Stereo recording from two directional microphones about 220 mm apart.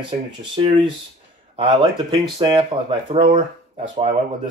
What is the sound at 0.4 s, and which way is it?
Speech, 20° right (ahead or behind).